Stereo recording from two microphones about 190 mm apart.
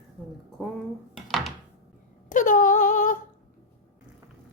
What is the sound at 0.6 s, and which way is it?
Speech, centre (ahead or behind).